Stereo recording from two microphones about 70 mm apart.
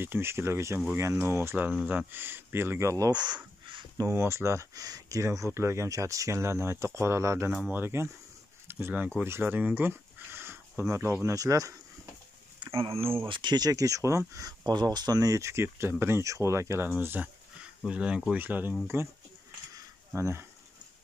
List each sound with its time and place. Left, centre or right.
0.0 s speech: right
3.1 s speech: right
4.1 s speech: right
4.7 s speech: right
5.9 s speech: right
11.3 s speech: right
13.4 s speech: right
14.6 s speech: right
16.9 s speech: right
17.8 s speech: centre
18.3 s speech: right
20.2 s speech: right